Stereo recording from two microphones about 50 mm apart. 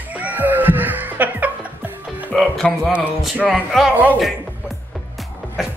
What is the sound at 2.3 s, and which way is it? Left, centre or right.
Music, centre.